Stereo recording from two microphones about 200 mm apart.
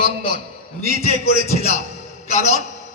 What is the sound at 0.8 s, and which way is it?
A man's voice, 30° left (ahead or behind).